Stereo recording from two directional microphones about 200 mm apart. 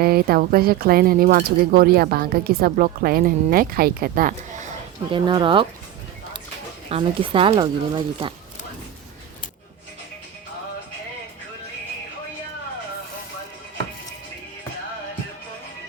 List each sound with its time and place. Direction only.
0.0 s speech: 50° right (ahead or behind)
5.1 s speech: 20° right (ahead or behind)
6.9 s speech: 25° right (ahead or behind)